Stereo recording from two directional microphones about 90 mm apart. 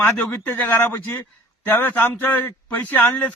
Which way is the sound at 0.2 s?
20° left (ahead or behind).